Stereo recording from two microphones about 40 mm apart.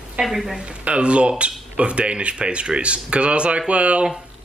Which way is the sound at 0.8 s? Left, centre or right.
Right.